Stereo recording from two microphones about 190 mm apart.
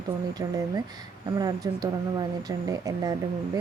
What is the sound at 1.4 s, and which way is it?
Speech, 20° right (ahead or behind).